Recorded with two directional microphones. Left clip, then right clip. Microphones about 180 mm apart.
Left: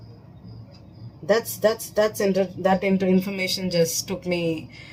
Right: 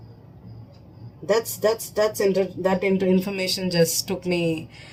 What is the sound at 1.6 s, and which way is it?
Speech, 40° right (ahead or behind).